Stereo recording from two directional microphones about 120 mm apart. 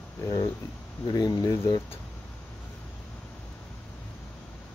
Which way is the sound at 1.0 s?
30° left (ahead or behind).